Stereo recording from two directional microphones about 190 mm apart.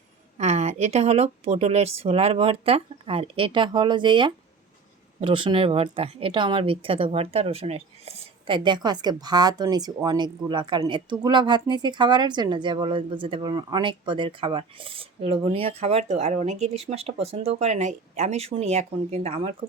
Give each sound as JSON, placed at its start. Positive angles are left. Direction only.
{"t": 0.3, "sound": "a woman's voice", "side_deg": -35}